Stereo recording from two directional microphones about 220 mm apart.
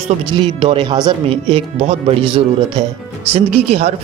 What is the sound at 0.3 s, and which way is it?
Speech, 20° right (ahead or behind).